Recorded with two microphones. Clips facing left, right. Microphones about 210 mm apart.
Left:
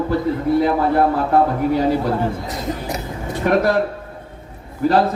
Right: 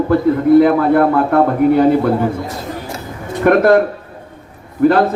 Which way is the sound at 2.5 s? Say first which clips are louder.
Even; 20° left (ahead or behind).